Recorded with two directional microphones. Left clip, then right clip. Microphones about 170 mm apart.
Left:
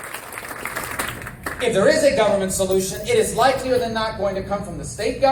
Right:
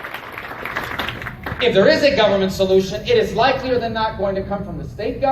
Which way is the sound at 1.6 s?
20° left (ahead or behind).